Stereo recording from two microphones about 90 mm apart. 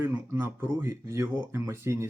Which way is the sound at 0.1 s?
25° right (ahead or behind).